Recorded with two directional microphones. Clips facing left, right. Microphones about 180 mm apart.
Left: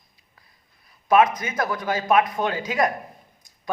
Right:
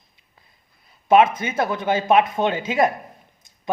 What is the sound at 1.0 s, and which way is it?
Speech, 25° right (ahead or behind).